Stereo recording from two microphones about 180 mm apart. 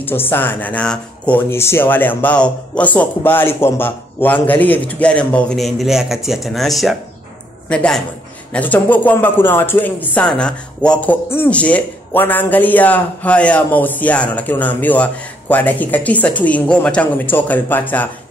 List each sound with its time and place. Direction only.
0.0 s a man's voice: 10° left (ahead or behind)